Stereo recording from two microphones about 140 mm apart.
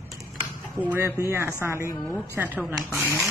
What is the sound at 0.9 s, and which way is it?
Speech, 20° right (ahead or behind).